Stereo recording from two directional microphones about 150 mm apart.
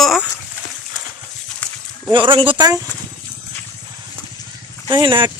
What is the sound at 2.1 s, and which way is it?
Speech, 35° right (ahead or behind).